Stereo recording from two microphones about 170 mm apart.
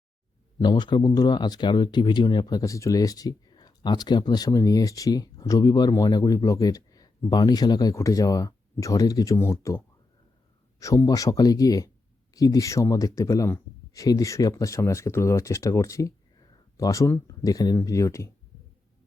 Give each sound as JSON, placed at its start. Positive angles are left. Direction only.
{"t": 0.6, "sound": "speech", "side_deg": 25}